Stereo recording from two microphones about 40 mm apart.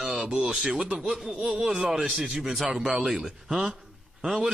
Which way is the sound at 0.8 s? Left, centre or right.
Right.